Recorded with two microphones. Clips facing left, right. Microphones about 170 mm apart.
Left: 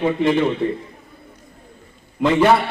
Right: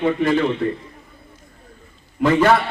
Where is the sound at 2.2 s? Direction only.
15° left (ahead or behind).